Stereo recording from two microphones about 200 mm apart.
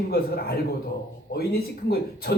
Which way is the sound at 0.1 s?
50° left (ahead or behind).